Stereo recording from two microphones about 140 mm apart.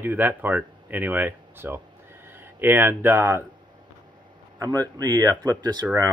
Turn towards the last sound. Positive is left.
turn(degrees=-30)  # may be behind; listen again after turning